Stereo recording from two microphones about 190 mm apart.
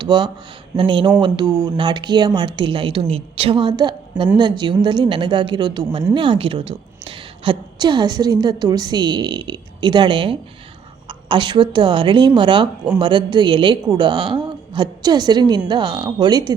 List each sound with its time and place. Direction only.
0.0 s a woman's voice: 25° right (ahead or behind)